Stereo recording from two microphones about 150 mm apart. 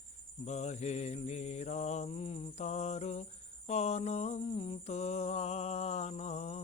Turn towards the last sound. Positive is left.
turn(degrees=50)  # may be behind; listen again after turning